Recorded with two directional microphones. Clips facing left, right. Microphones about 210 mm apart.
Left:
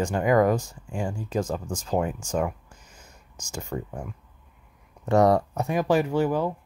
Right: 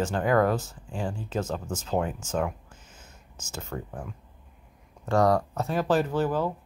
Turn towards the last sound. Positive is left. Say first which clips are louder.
# left 2 dB
turn(degrees=15)  # may be behind; listen again after turning